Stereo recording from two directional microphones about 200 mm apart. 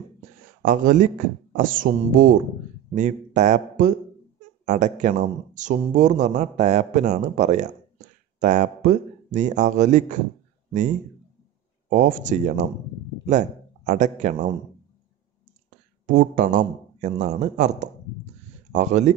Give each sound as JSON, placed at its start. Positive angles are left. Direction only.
{"t": 0.6, "sound": "a man's voice", "side_deg": -40}
{"t": 11.9, "sound": "a man's voice", "side_deg": -40}
{"t": 16.1, "sound": "a man's voice", "side_deg": -40}